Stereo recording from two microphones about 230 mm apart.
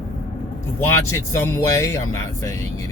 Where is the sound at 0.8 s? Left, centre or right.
Centre.